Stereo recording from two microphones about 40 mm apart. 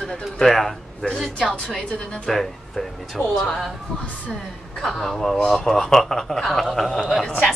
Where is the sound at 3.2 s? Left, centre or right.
Left.